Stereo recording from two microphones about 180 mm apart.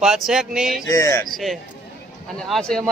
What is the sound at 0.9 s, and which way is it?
Speech, 15° left (ahead or behind).